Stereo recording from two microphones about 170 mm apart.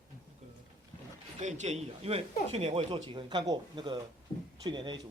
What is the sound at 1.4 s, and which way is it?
Speech, 45° right (ahead or behind).